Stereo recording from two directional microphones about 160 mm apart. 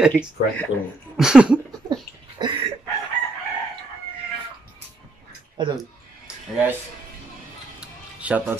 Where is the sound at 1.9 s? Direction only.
25° right (ahead or behind).